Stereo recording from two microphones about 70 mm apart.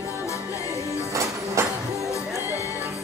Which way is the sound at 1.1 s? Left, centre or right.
Right.